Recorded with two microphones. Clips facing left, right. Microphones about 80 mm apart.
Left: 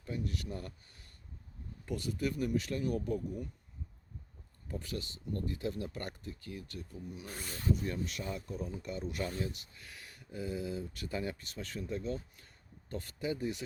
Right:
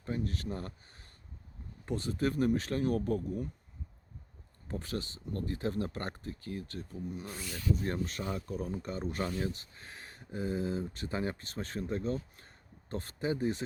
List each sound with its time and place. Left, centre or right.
0.0 s speech: right
4.7 s speech: right
7.3 s speech: left
7.8 s speech: right